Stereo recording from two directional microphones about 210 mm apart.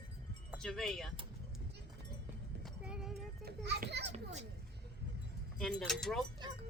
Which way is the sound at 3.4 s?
50° right (ahead or behind).